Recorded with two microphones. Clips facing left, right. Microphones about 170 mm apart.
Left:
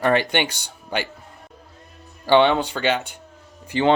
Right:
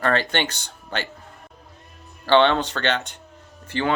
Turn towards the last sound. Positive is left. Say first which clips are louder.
# left 4 dB
turn(degrees=15)  # may be behind; listen again after turning